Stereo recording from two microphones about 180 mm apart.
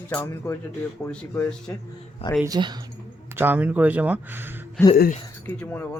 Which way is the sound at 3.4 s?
10° right (ahead or behind).